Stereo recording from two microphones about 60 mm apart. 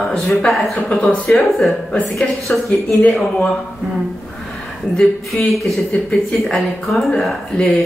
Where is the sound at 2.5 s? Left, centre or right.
Left.